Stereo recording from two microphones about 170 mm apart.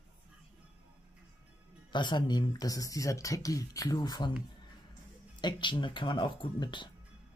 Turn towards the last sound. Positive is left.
turn(degrees=25)  # may be behind; listen again after turning